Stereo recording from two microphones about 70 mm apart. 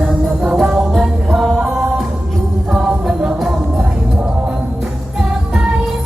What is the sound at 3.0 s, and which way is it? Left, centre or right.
Music, centre.